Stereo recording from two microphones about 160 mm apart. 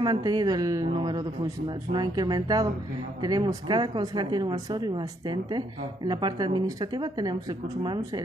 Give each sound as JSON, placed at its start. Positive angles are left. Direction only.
{"t": 0.0, "sound": "speech", "side_deg": -25}